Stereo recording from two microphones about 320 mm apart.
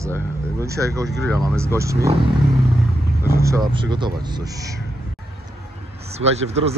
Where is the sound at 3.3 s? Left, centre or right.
Centre.